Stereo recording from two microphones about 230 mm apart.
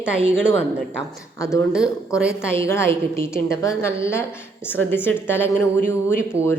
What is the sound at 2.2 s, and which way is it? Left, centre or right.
A woman's voice, centre.